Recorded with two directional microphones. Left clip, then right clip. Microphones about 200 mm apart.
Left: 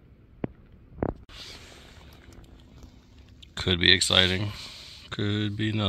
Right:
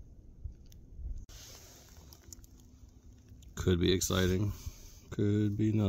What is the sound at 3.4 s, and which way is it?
Speech, 5° right (ahead or behind).